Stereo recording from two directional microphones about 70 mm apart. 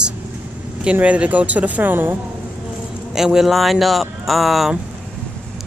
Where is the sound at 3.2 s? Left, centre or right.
Centre.